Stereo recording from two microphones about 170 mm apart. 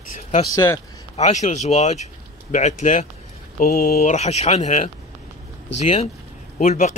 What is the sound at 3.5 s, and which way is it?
Speech, 60° left (ahead or behind).